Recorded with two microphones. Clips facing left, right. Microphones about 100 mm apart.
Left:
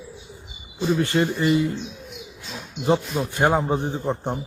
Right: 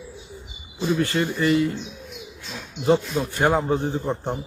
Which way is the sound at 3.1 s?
15° left (ahead or behind).